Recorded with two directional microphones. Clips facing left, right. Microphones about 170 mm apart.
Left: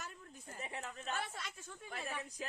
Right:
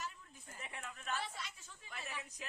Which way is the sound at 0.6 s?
30° left (ahead or behind).